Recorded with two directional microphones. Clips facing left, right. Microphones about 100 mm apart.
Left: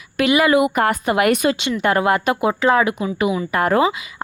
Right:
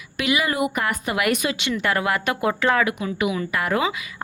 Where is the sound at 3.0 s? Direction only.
35° left (ahead or behind).